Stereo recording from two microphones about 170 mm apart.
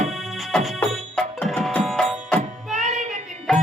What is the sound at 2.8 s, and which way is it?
Child singing, 45° right (ahead or behind).